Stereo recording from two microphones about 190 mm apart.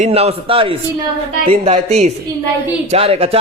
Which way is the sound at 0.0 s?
30° right (ahead or behind).